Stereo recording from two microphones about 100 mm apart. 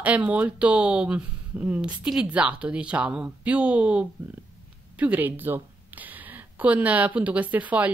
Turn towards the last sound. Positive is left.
turn(degrees=-15)  # may be behind; listen again after turning